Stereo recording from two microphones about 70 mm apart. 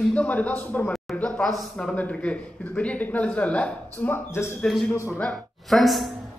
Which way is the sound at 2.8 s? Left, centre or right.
Left.